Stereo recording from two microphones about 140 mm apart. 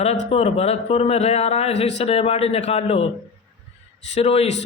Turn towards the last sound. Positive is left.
turn(degrees=45)  # may be behind; listen again after turning